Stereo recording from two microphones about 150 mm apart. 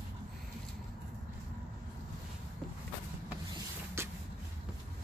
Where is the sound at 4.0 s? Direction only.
15° right (ahead or behind).